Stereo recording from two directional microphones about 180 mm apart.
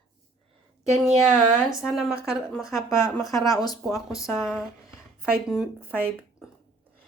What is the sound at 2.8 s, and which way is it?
A woman's voice, 15° left (ahead or behind).